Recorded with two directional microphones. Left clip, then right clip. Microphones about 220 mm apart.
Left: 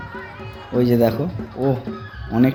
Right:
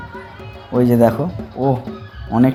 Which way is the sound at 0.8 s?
10° right (ahead or behind).